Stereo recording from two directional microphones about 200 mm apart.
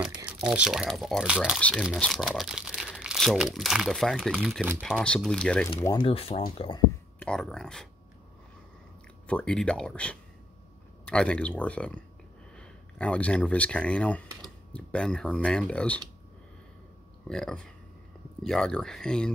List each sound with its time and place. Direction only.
0.0 s speech: 5° right (ahead or behind)
5.0 s speech: 5° left (ahead or behind)
5.9 s speech: 25° left (ahead or behind)
7.2 s speech: 5° left (ahead or behind)
9.3 s speech: 5° left (ahead or behind)
17.3 s speech: 5° left (ahead or behind)